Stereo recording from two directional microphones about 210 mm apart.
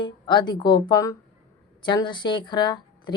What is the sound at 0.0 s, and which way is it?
Speech, 20° left (ahead or behind).